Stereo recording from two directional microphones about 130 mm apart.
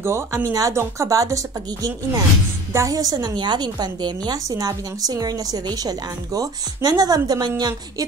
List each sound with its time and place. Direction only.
0.0 s a woman's voice: 20° right (ahead or behind)